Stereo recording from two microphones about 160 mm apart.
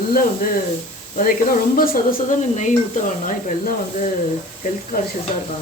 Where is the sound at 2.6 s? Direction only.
50° left (ahead or behind).